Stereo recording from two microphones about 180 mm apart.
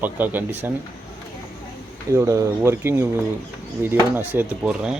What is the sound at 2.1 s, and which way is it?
Speech, 15° right (ahead or behind).